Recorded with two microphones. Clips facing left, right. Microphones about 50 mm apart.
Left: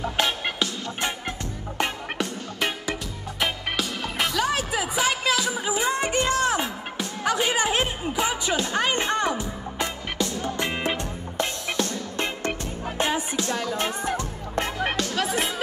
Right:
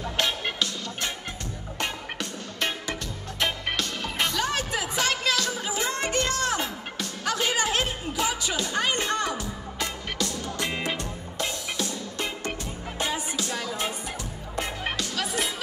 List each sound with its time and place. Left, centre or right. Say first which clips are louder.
0.0 s music: left 2 dB; centre
3.3 s music: left 1 dB; centre; by 11.4 s left
12.9 s music: left 4 dB; left
15.0 s music: left 4 dB; left